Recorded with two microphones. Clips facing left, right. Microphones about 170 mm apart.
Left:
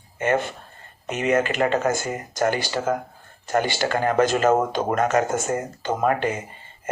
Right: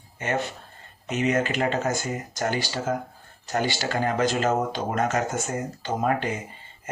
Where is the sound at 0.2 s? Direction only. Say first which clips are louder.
Left 5 dB; 50° left (ahead or behind).